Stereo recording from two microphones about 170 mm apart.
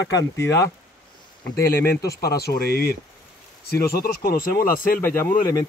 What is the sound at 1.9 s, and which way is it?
Speech, 70° left (ahead or behind).